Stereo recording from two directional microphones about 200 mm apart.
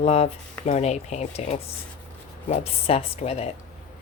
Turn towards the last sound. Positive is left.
turn(degrees=30)  # may be behind; listen again after turning